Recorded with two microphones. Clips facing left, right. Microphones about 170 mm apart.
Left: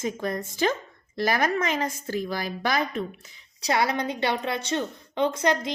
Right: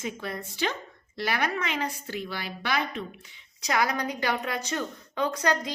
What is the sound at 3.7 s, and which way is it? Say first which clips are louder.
A woman's voice: left 2 dB; 30° left (ahead or behind).